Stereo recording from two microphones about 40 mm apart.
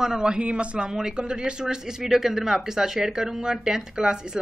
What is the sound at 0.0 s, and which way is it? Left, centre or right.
Speech, centre.